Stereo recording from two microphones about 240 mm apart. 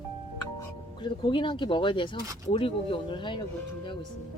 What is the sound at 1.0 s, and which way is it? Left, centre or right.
Speech, centre.